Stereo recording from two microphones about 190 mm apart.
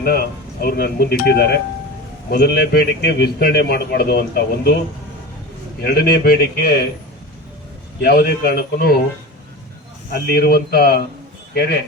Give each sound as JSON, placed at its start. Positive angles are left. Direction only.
{"t": 0.0, "sound": "a man's voice", "side_deg": 55}
{"t": 5.8, "sound": "a man's voice", "side_deg": 55}
{"t": 8.0, "sound": "a man's voice", "side_deg": 55}
{"t": 10.1, "sound": "a man's voice", "side_deg": 55}